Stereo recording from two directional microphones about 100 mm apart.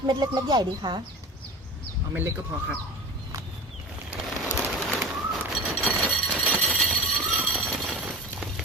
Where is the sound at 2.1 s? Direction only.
20° right (ahead or behind).